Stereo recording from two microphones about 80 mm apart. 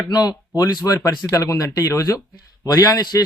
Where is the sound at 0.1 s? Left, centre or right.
Left.